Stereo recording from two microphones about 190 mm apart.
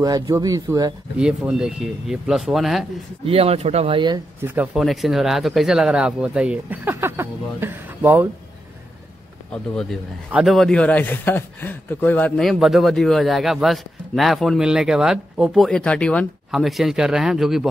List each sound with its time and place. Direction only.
0.0 s a man's voice: 20° right (ahead or behind)
1.1 s speech: 5° right (ahead or behind)
3.3 s speech: 30° right (ahead or behind)
4.4 s speech: 10° right (ahead or behind)
9.5 s speech: 5° left (ahead or behind)